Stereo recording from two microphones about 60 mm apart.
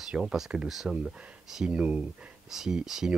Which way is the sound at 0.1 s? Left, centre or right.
Centre.